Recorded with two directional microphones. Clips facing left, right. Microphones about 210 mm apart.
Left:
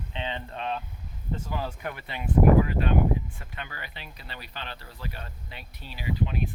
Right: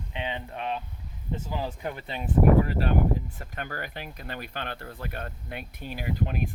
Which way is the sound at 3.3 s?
45° right (ahead or behind).